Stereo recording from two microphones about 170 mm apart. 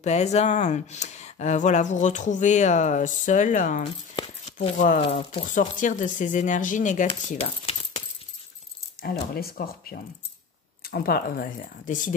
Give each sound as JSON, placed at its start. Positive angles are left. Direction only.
{"t": 0.0, "sound": "speech", "side_deg": 40}
{"t": 3.8, "sound": "a sound", "side_deg": 30}
{"t": 4.5, "sound": "speech", "side_deg": 45}
{"t": 5.5, "sound": "speech", "side_deg": 50}
{"t": 9.0, "sound": "speech", "side_deg": 65}